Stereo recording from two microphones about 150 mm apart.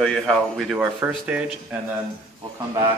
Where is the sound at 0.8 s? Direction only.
10° right (ahead or behind).